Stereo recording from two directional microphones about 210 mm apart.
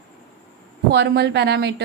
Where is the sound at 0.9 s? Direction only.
55° right (ahead or behind).